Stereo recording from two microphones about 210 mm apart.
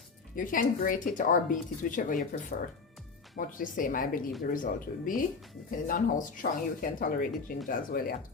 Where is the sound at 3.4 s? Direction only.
40° left (ahead or behind).